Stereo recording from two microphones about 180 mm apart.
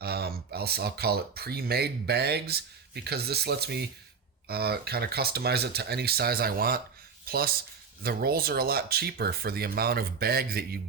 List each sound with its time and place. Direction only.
0.0 s speech: 60° right (ahead or behind)